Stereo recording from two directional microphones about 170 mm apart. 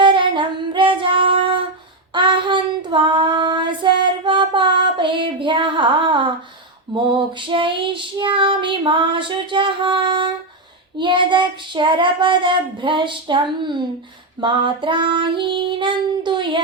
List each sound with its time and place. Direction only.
0.0 s female singing: 30° right (ahead or behind)
2.1 s child singing: 30° right (ahead or behind)